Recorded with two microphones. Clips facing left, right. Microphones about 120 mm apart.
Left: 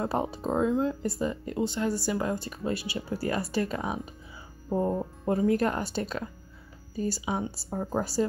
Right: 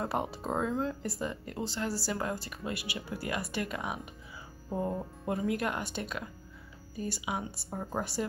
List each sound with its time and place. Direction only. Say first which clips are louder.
0.0 s speech: left 4 dB; 25° left (ahead or behind)